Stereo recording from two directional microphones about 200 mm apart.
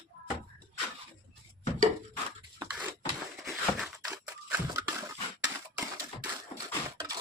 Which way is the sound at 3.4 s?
Centre (ahead or behind).